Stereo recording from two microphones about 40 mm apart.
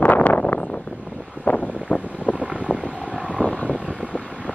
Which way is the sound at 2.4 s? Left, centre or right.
Centre.